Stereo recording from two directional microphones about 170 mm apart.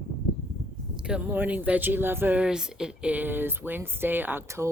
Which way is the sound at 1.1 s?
10° right (ahead or behind).